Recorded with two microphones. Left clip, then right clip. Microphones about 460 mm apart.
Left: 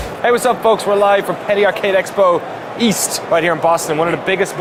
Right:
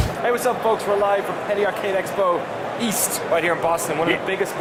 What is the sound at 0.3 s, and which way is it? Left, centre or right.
Speech, left.